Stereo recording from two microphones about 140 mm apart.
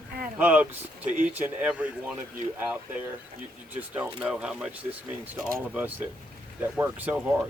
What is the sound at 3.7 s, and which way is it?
Speech, 10° right (ahead or behind).